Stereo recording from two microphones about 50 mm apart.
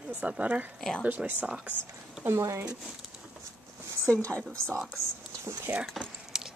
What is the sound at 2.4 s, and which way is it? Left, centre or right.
Speech, right.